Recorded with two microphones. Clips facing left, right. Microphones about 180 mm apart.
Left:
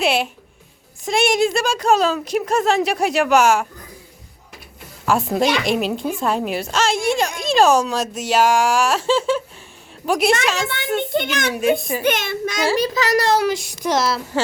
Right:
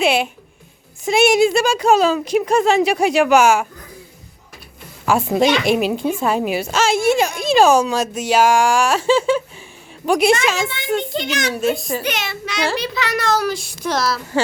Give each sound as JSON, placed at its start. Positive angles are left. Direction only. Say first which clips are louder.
{"t": 0.0, "sound": "a sound", "louder": "right 2 dB", "side_deg": 0}
{"t": 1.0, "sound": "speech", "louder": "right 4 dB", "side_deg": 0}
{"t": 5.0, "sound": "speech", "louder": "right 2 dB", "side_deg": 0}
{"t": 11.1, "sound": "a child's voice", "louder": "left 1 dB", "side_deg": 55}